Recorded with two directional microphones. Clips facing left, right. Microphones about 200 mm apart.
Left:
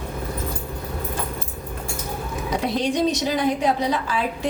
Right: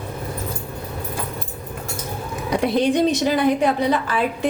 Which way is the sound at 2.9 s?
60° right (ahead or behind).